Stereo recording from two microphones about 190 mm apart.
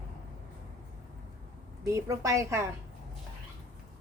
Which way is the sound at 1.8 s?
15° right (ahead or behind).